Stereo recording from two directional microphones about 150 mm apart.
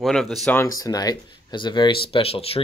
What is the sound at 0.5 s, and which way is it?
Speech, 20° left (ahead or behind).